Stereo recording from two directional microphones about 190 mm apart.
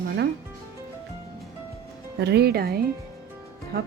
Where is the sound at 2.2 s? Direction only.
60° right (ahead or behind).